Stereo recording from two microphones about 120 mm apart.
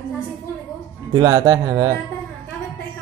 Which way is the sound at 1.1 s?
35° right (ahead or behind).